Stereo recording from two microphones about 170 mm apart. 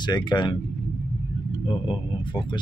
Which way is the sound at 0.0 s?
25° left (ahead or behind).